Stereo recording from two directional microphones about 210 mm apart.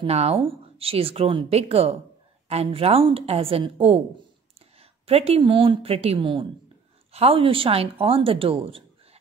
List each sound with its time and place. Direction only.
0.0 s speech: 30° right (ahead or behind)